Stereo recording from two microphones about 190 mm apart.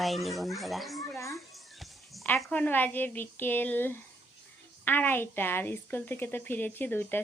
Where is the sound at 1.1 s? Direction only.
15° left (ahead or behind).